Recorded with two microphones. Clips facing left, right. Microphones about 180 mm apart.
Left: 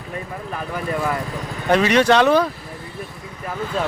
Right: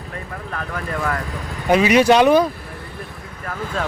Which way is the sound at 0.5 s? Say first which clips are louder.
Left 2 dB; 15° left (ahead or behind).